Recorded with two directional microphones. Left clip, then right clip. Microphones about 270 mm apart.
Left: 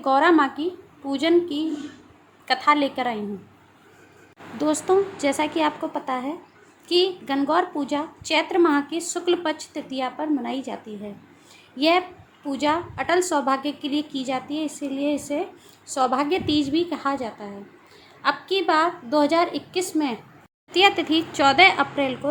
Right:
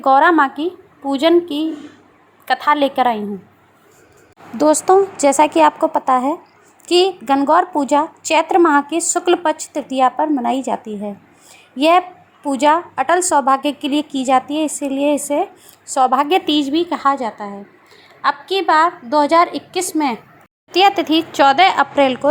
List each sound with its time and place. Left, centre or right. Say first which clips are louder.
0.0 s a woman's voice: right 7 dB; centre
4.5 s a woman's voice: right 9 dB; right